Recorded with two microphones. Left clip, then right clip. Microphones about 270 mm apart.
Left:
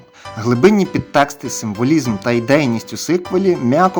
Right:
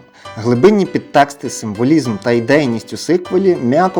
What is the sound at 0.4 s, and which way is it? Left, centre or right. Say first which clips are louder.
Speech: right 2 dB; centre.